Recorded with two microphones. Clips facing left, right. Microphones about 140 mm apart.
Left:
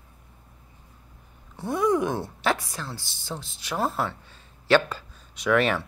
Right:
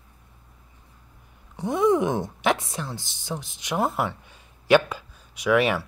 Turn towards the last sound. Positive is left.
turn(degrees=-10)  # may be behind; listen again after turning